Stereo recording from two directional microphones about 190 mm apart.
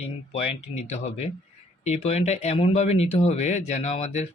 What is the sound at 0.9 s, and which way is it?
Speech, 35° left (ahead or behind).